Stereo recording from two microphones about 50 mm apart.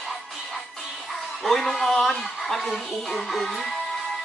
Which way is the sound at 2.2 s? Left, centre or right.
Centre.